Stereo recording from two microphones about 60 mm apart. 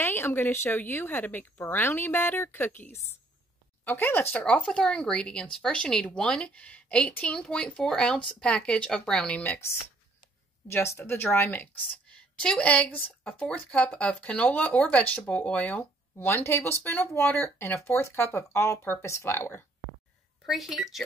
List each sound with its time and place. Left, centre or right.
0.0 s a woman's voice: left
4.6 s speech: centre
10.7 s speech: left
12.4 s speech: centre
16.3 s speech: left
20.4 s speech: centre